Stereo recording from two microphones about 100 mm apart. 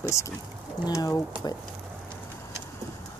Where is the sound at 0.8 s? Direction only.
35° left (ahead or behind).